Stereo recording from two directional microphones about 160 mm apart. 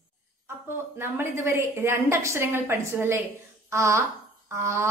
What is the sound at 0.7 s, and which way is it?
A woman's voice, 15° right (ahead or behind).